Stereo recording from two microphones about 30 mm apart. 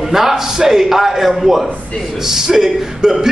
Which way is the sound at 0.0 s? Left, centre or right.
Centre.